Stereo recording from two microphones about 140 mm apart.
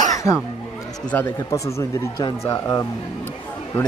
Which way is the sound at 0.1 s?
20° left (ahead or behind).